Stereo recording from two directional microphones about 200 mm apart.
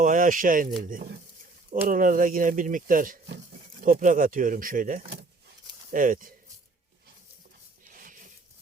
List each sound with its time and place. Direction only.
0.0 s speech: 40° right (ahead or behind)
1.9 s speech: 45° right (ahead or behind)
7.9 s a sound: 40° right (ahead or behind)